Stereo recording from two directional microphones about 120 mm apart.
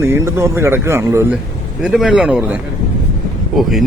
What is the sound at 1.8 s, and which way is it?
Speech, 5° right (ahead or behind).